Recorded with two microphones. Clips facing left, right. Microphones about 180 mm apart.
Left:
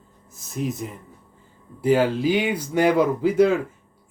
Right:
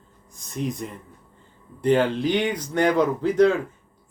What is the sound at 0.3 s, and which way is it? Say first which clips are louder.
Speech: left 1 dB; 5° left (ahead or behind).